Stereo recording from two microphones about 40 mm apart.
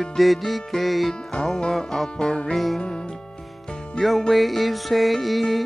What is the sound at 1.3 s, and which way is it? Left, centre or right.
Music, left.